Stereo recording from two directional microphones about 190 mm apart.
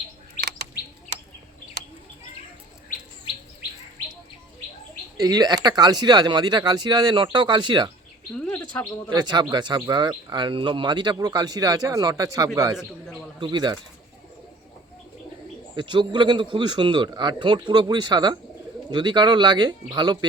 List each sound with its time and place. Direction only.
5.1 s speech: 20° right (ahead or behind)
8.4 s speech: 5° left (ahead or behind)
9.0 s speech: 20° right (ahead or behind)
12.7 s a man's voice: centre (ahead or behind)
13.4 s speech: 20° right (ahead or behind)
15.7 s speech: 25° right (ahead or behind)